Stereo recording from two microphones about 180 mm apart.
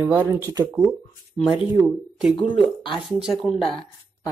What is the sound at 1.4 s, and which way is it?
Speech, 5° right (ahead or behind).